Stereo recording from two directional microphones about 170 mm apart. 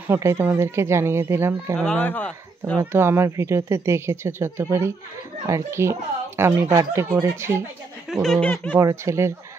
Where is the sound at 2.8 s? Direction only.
15° right (ahead or behind).